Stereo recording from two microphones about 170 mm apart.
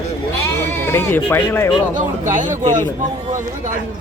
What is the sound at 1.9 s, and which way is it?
Speech, 50° right (ahead or behind).